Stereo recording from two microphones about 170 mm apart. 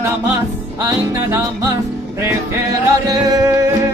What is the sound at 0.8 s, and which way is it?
Music, 20° right (ahead or behind).